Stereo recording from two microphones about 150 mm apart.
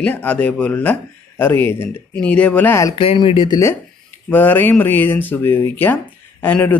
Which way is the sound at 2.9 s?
35° left (ahead or behind).